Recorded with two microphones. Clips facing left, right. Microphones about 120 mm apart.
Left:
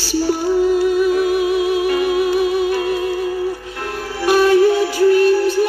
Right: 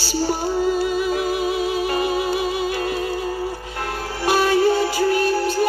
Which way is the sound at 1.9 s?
30° right (ahead or behind).